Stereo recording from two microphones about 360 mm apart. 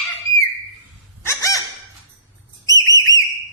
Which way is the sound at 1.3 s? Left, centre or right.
Centre.